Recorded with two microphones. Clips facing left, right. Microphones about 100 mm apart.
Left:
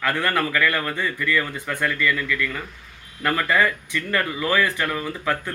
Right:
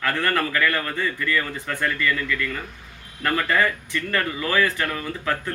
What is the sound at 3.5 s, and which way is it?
Speech, 10° left (ahead or behind).